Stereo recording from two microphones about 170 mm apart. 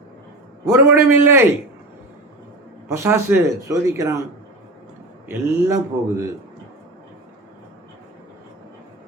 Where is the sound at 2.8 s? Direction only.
15° right (ahead or behind).